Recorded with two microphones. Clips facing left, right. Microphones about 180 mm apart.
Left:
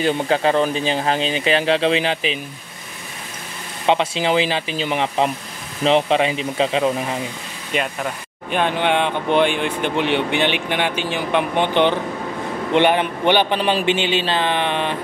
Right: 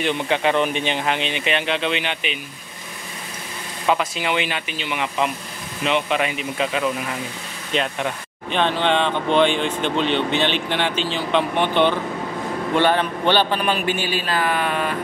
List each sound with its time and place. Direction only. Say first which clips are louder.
0.0 s speech: left 3 dB; 35° left (ahead or behind)
3.8 s speech: left 3 dB; 30° left (ahead or behind)
7.7 s speech: even; 5° left (ahead or behind); by 15.0 s 25° left (ahead or behind)